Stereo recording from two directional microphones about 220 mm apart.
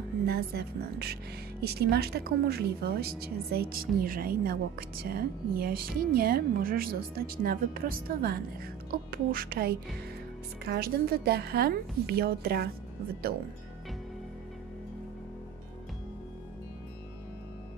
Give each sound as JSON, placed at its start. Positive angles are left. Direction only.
{"t": 0.3, "sound": "speech", "side_deg": -45}